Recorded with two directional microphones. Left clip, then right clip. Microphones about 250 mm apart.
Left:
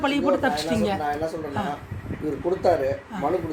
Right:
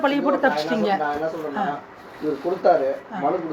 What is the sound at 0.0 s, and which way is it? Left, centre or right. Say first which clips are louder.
Speech: right 2 dB; left.